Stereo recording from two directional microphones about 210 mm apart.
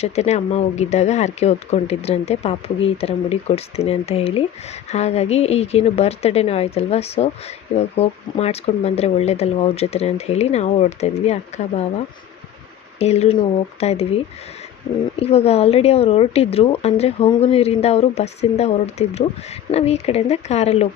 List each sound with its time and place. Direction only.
0.0 s a woman's voice: 30° left (ahead or behind)
15.2 s a woman's voice: 30° left (ahead or behind)